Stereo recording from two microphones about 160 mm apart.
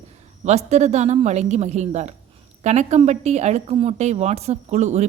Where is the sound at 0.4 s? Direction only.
45° right (ahead or behind).